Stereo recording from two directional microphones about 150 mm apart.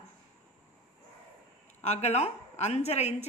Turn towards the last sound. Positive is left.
turn(degrees=45)  # may be behind; listen again after turning